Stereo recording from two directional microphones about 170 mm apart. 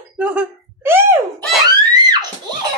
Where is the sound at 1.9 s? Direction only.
25° right (ahead or behind).